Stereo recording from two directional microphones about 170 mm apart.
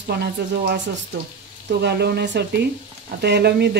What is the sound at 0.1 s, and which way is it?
Speech, 70° right (ahead or behind).